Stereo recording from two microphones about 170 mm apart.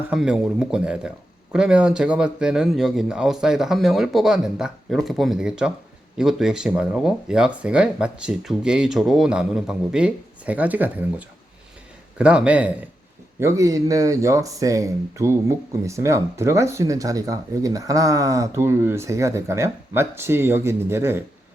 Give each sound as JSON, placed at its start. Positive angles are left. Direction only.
{"t": 0.1, "sound": "speech", "side_deg": -5}
{"t": 13.4, "sound": "speech", "side_deg": -20}